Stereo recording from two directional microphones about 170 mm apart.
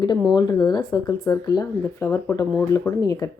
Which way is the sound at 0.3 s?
25° left (ahead or behind).